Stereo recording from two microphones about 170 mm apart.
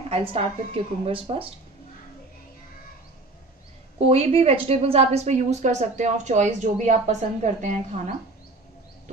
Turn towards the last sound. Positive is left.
turn(degrees=-45)  # may be behind; listen again after turning